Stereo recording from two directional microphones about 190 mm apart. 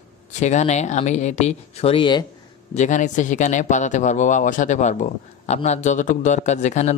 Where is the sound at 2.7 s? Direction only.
40° left (ahead or behind).